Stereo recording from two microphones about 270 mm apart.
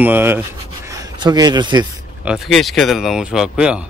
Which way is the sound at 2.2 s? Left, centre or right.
Centre.